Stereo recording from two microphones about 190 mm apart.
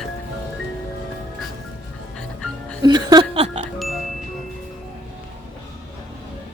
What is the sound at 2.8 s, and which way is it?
Music, 20° right (ahead or behind).